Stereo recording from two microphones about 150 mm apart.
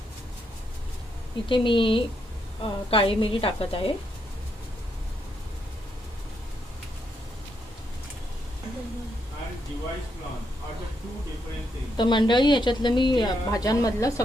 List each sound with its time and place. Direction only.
1.5 s a woman's voice: 35° left (ahead or behind)
11.9 s a woman's voice: 30° left (ahead or behind)